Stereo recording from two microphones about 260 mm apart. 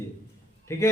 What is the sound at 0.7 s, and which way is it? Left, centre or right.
Speech, centre.